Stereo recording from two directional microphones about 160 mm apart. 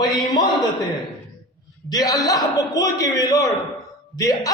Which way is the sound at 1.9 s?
25° left (ahead or behind).